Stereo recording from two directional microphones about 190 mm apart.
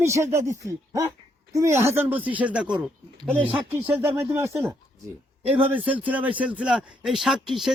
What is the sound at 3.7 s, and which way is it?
A man's voice, 10° right (ahead or behind).